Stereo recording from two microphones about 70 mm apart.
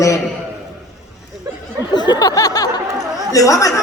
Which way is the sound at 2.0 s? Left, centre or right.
Left.